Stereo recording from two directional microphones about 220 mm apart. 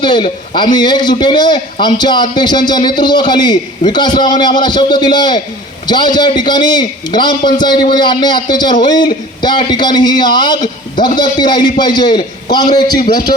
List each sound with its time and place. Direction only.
0.0 s a man's voice: 20° left (ahead or behind)